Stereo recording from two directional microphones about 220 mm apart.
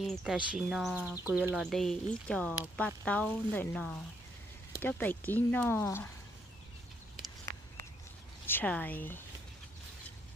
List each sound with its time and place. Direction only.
0.0 s speech: centre (ahead or behind)
8.5 s speech: 5° left (ahead or behind)